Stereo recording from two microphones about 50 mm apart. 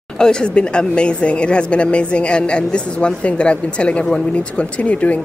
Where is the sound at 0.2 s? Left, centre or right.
Centre.